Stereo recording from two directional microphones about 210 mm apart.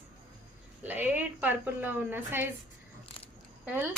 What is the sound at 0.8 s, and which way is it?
A woman's voice, 10° right (ahead or behind).